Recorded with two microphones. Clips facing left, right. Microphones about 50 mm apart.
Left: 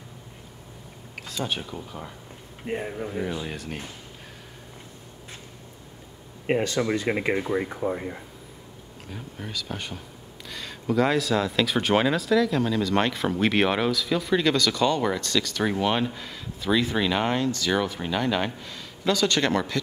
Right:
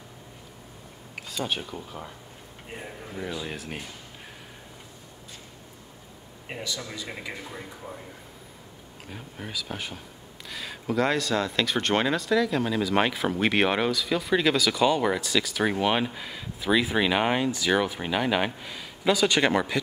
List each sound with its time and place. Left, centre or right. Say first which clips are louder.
1.1 s speech: even; centre
2.7 s speech: left 10 dB; left
3.1 s speech: even; centre
3.4 s speech: left 1 dB; centre
6.4 s speech: left 12 dB; left
9.1 s speech: left 1 dB; centre